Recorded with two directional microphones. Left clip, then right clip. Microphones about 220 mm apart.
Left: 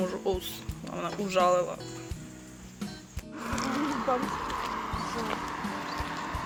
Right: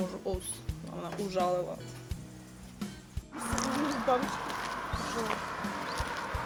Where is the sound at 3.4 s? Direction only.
50° right (ahead or behind).